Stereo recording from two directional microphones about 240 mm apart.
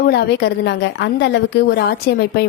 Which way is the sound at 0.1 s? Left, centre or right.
Left.